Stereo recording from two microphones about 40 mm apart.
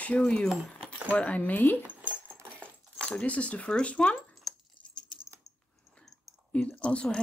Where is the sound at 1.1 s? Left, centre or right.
Left.